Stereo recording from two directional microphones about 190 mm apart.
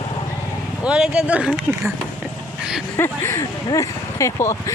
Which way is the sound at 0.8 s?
5° right (ahead or behind).